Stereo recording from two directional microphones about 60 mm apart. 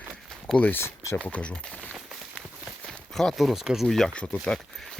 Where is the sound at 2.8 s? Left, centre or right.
Centre.